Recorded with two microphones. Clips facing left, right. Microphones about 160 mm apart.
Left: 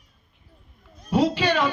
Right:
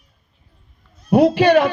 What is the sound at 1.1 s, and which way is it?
Speech, 60° right (ahead or behind).